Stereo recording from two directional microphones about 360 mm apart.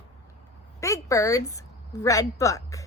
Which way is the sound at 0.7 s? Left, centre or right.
Centre.